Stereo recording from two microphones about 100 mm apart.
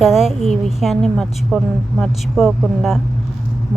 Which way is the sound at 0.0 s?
5° right (ahead or behind).